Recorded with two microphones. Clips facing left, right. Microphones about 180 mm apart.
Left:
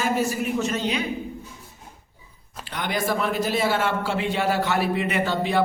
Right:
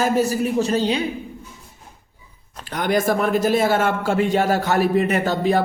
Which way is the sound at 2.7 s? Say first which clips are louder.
Right 6 dB; 45° right (ahead or behind).